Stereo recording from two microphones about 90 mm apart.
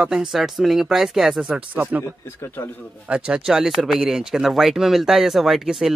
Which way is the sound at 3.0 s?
10° right (ahead or behind).